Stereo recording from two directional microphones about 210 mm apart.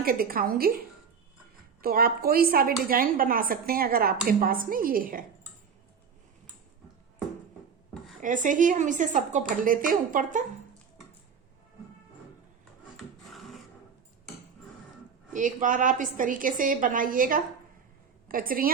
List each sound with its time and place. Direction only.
0.0 s a woman's voice: 45° right (ahead or behind)
8.2 s a woman's voice: 40° right (ahead or behind)
13.3 s a sound: centre (ahead or behind)
15.3 s a woman's voice: 40° right (ahead or behind)